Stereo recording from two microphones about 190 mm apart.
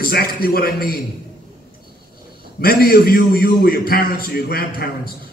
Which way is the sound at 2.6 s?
50° left (ahead or behind).